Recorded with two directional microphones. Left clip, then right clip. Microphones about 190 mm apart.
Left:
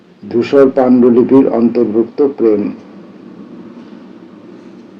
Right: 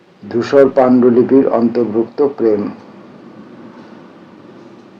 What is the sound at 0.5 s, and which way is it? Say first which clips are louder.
A man's voice: even; 15° right (ahead or behind).